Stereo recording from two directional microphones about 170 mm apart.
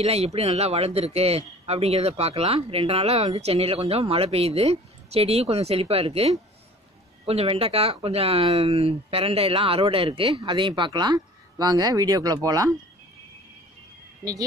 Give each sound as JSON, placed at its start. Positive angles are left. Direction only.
{"t": 0.0, "sound": "speech", "side_deg": -35}